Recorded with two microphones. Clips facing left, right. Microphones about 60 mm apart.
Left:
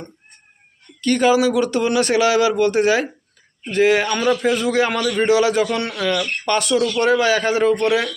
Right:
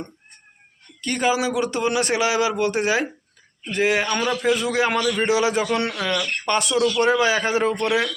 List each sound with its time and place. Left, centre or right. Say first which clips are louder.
1.0 s a man's voice: left 6 dB; centre